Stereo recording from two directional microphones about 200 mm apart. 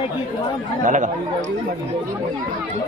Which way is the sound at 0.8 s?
40° right (ahead or behind).